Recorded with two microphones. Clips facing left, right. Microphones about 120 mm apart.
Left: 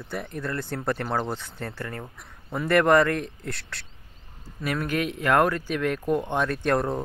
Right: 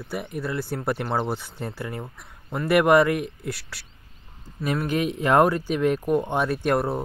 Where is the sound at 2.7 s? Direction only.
10° right (ahead or behind).